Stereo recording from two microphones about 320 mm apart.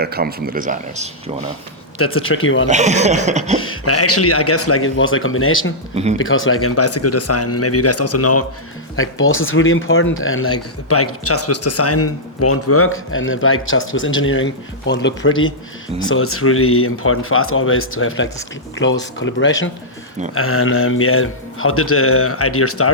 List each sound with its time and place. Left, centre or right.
0.0 s speech: right
2.0 s speech: left
2.6 s speech: right
3.6 s speech: left
5.9 s speech: centre
6.1 s speech: left